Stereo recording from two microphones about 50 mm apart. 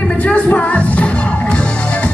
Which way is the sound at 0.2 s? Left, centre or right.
Left.